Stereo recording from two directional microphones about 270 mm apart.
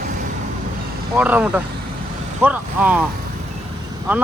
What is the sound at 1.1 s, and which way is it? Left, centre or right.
Speech, centre.